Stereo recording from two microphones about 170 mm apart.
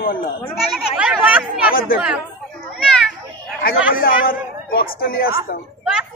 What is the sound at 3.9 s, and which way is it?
A man's voice, 60° left (ahead or behind).